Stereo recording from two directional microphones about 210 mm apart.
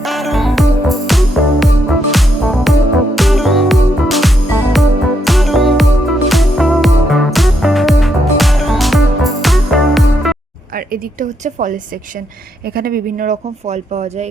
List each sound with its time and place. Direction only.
0.0 s music: centre (ahead or behind)
10.8 s a woman's voice: 40° right (ahead or behind)